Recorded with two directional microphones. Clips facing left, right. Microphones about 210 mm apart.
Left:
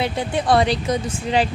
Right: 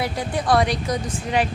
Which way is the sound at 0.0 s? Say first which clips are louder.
Left 3 dB; 25° left (ahead or behind).